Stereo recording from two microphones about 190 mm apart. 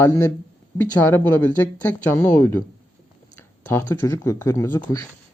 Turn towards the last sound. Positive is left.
turn(degrees=15)  # may be behind; listen again after turning